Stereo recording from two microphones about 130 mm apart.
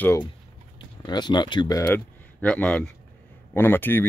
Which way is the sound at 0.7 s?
35° left (ahead or behind).